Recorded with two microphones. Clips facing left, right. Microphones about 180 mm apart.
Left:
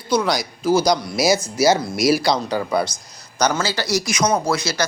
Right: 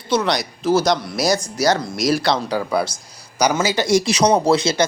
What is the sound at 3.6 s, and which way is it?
Speech, 20° right (ahead or behind).